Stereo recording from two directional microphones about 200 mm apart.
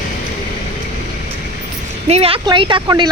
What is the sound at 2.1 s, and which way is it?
A woman's voice, 30° right (ahead or behind).